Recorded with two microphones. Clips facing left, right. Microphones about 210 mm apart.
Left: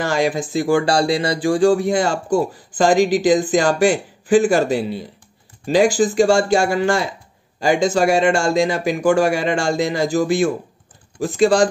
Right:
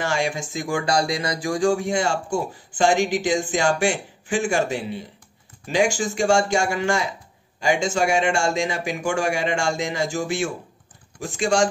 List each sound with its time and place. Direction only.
0.0 s speech: 35° left (ahead or behind)